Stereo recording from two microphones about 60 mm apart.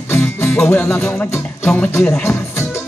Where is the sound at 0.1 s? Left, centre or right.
Left.